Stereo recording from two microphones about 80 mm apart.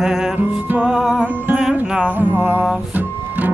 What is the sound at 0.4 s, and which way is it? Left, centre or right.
Music, right.